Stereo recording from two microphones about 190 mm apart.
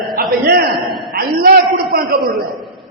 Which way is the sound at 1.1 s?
50° right (ahead or behind).